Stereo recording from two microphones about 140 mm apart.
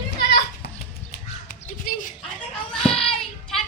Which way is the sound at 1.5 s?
70° left (ahead or behind).